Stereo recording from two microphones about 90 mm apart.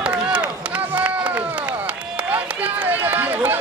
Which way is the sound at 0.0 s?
15° right (ahead or behind).